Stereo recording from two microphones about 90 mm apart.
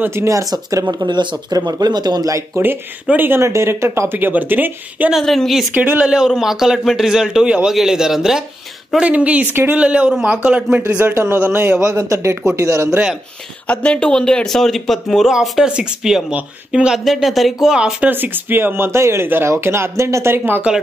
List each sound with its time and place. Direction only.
0.0 s speech: 30° right (ahead or behind)
2.6 s speech: 20° right (ahead or behind)
5.1 s speech: 5° left (ahead or behind)
5.8 s a man's voice: 15° right (ahead or behind)
6.1 s a man's voice: 5° right (ahead or behind); by 11.7 s 20° right (ahead or behind)
11.8 s speech: 35° right (ahead or behind)
13.7 s a man's voice: 10° left (ahead or behind); by 18.1 s 10° right (ahead or behind)
18.1 s speech: 20° right (ahead or behind)